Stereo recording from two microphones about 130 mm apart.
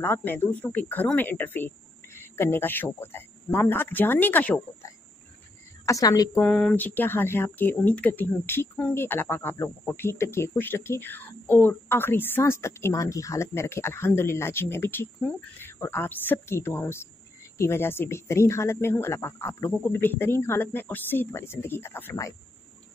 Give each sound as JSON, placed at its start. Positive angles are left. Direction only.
{"t": 0.0, "sound": "speech", "side_deg": 15}
{"t": 5.9, "sound": "speech", "side_deg": 25}
{"t": 6.4, "sound": "speech", "side_deg": 10}